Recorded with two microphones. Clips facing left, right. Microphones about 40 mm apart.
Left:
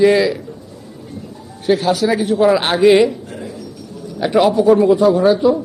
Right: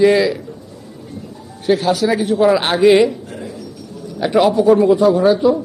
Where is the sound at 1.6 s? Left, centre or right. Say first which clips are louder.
Even; centre.